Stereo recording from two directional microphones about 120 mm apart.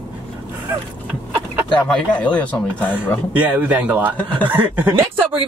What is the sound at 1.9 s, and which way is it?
Speech, 10° left (ahead or behind).